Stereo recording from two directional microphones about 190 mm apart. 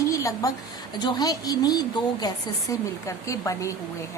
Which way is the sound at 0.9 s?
20° left (ahead or behind).